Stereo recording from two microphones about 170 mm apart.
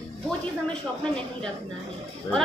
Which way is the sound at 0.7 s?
5° left (ahead or behind).